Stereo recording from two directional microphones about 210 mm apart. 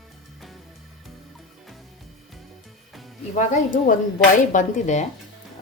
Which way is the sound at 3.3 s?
40° left (ahead or behind).